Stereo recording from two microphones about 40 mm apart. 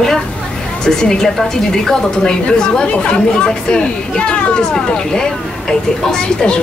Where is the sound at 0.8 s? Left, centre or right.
Centre.